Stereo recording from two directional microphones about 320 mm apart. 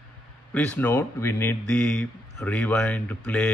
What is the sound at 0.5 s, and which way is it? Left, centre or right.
A man's voice, centre.